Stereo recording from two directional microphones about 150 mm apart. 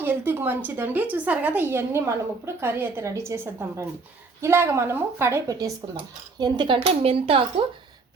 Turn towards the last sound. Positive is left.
turn(degrees=-40)  # may be behind; listen again after turning